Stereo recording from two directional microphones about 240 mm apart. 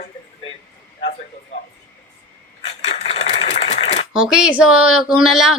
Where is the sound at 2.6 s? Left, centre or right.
Left.